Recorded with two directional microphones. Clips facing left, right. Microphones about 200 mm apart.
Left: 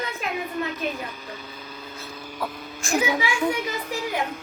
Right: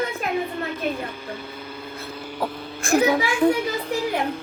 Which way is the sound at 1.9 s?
60° right (ahead or behind).